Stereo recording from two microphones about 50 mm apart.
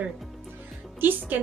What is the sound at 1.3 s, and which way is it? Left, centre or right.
Speech, right.